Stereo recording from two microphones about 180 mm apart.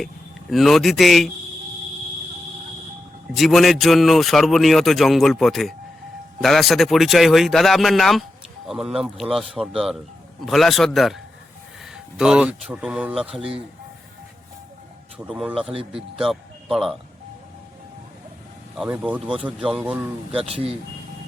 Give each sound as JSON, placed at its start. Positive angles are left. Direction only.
{"t": 0.5, "sound": "speech", "side_deg": 0}
{"t": 3.3, "sound": "speech", "side_deg": 0}
{"t": 15.2, "sound": "speech", "side_deg": -5}
{"t": 15.6, "sound": "speech", "side_deg": -30}
{"t": 16.1, "sound": "speech", "side_deg": 0}
{"t": 18.7, "sound": "speech", "side_deg": -5}